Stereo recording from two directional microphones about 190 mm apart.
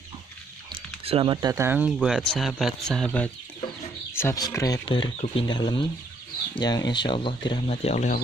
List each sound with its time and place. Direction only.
0.7 s speech: 30° right (ahead or behind); by 8.2 s 40° left (ahead or behind)